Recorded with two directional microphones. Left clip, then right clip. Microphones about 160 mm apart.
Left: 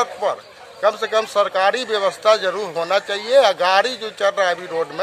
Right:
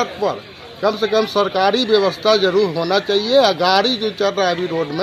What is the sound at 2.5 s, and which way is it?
Speech, 10° left (ahead or behind).